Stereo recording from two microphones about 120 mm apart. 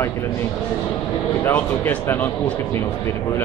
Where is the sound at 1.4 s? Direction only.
20° left (ahead or behind).